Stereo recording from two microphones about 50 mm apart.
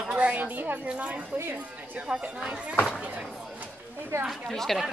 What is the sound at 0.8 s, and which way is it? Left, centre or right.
Speech, right.